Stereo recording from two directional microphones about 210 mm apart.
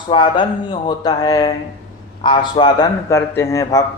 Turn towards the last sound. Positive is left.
turn(degrees=15)  # may be behind; listen again after turning